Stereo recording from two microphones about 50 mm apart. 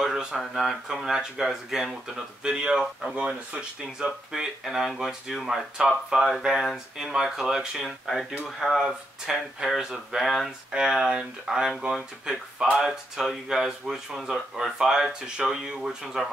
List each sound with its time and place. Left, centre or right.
0.0 s speech: centre
0.8 s speech: centre
2.4 s speech: centre
4.3 s speech: centre
10.7 s speech: centre